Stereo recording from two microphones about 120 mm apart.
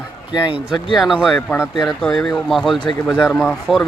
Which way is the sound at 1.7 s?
Centre (ahead or behind).